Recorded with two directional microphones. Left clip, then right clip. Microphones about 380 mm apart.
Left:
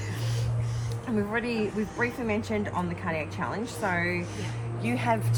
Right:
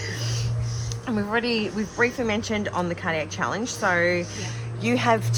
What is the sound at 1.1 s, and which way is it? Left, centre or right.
Speech, centre.